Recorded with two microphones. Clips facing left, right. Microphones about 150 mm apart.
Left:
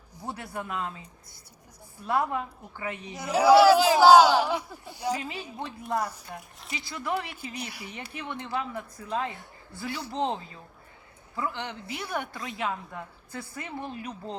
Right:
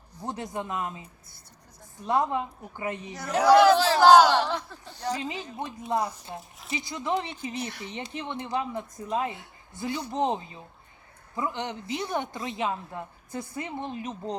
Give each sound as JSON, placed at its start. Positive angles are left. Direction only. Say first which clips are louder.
{"t": 0.2, "sound": "a woman's voice", "louder": "right 3 dB", "side_deg": -20}
{"t": 3.2, "sound": "a man's voice", "louder": "left 1 dB", "side_deg": 5}
{"t": 5.2, "sound": "a woman's voice", "louder": "right 2 dB", "side_deg": -20}